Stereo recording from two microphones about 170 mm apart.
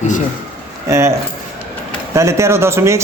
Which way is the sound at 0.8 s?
15° right (ahead or behind).